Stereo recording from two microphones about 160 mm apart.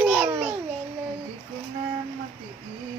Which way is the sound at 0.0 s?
5° right (ahead or behind).